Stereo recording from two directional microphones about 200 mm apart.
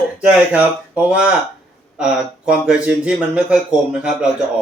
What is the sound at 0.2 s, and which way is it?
Speech, 5° right (ahead or behind).